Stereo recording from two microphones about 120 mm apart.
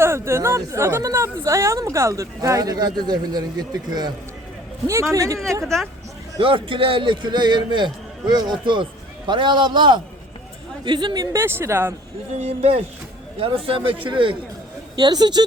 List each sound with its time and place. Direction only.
0.0 s speech: 20° right (ahead or behind)
5.1 s speech: 25° right (ahead or behind)
5.6 s speech: centre (ahead or behind)
6.4 s a man's voice: 45° right (ahead or behind); by 11.9 s 20° right (ahead or behind)
12.4 s a man's voice: 60° right (ahead or behind); by 15.4 s 35° right (ahead or behind)